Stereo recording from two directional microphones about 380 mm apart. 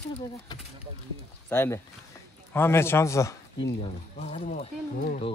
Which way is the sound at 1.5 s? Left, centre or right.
Centre.